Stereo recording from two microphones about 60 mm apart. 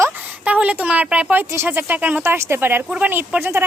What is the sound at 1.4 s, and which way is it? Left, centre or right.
Speech, right.